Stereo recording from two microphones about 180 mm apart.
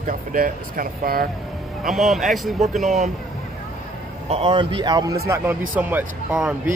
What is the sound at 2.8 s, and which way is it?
Speech, 40° right (ahead or behind).